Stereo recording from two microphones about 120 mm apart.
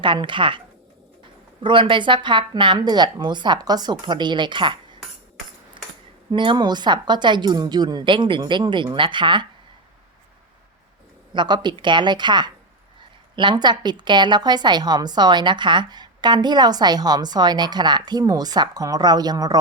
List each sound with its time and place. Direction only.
0.0 s speech: 40° right (ahead or behind)
1.6 s a woman's voice: 45° right (ahead or behind)
5.8 s cutlery: 45° right (ahead or behind)
6.3 s a woman's voice: 45° right (ahead or behind)
11.3 s a woman's voice: 40° right (ahead or behind)